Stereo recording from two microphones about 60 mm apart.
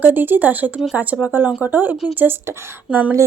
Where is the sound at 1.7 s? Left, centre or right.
Right.